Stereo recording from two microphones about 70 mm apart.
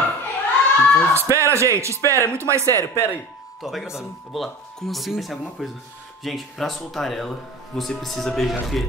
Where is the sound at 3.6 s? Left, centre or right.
Centre.